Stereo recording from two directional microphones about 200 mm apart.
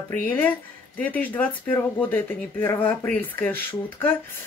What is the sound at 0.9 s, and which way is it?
Speech, 10° left (ahead or behind).